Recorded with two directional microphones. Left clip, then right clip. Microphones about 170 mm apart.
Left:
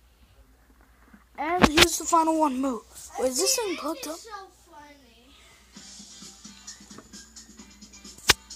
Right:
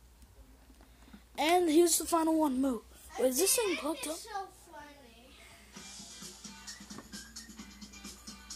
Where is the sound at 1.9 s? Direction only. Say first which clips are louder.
Left 7 dB; centre (ahead or behind).